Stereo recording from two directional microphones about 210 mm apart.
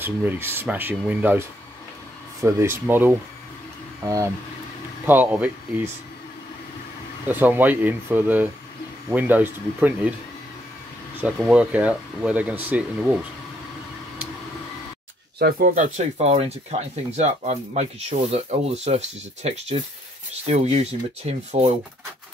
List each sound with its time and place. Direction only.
0.0 s speech: 10° right (ahead or behind)
2.4 s speech: 10° right (ahead or behind)
7.2 s speech: 10° right (ahead or behind)
11.1 s speech: 5° right (ahead or behind)
15.3 s speech: 45° right (ahead or behind)